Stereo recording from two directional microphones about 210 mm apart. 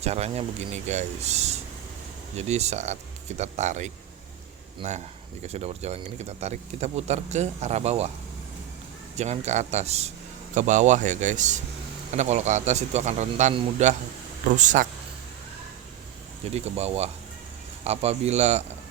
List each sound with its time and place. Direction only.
0.0 s speech: 30° right (ahead or behind)
9.1 s speech: 30° right (ahead or behind)
16.5 s speech: 30° right (ahead or behind)